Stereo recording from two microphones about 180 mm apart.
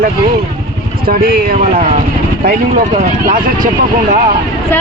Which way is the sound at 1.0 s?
55° right (ahead or behind).